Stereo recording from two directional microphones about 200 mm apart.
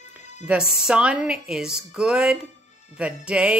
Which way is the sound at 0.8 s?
5° right (ahead or behind).